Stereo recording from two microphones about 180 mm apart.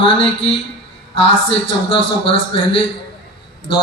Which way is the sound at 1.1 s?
30° left (ahead or behind).